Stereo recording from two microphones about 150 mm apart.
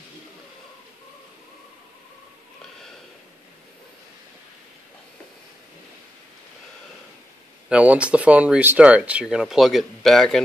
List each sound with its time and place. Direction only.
7.7 s speech: 10° right (ahead or behind)